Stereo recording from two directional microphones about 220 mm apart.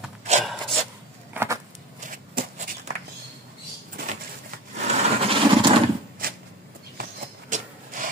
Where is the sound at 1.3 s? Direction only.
10° right (ahead or behind).